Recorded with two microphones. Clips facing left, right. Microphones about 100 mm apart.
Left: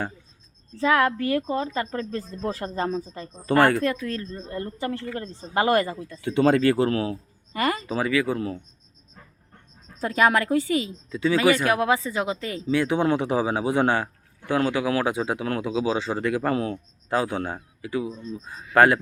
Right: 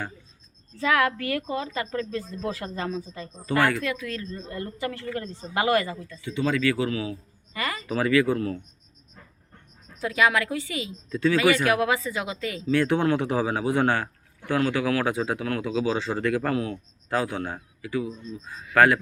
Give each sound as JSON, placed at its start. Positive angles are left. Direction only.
{"t": 0.8, "sound": "a man's voice", "side_deg": 30}
{"t": 3.5, "sound": "speech", "side_deg": 35}
{"t": 5.5, "sound": "speech", "side_deg": 40}
{"t": 6.1, "sound": "speech", "side_deg": 60}
{"t": 7.9, "sound": "a man's voice", "side_deg": 15}
{"t": 10.0, "sound": "speech", "side_deg": 40}
{"t": 11.1, "sound": "speech", "side_deg": 15}
{"t": 11.3, "sound": "a man's voice", "side_deg": 30}
{"t": 12.7, "sound": "a man's voice", "side_deg": 15}
{"t": 15.4, "sound": "a man's voice", "side_deg": 30}
{"t": 15.7, "sound": "a man's voice", "side_deg": 15}